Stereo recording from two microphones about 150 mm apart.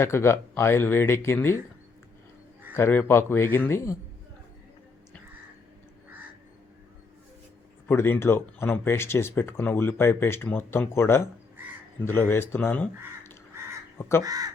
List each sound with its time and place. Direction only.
0.0 s speech: 15° left (ahead or behind)
2.7 s speech: 15° left (ahead or behind)
7.9 s speech: 15° left (ahead or behind)
14.3 s speech: 25° right (ahead or behind)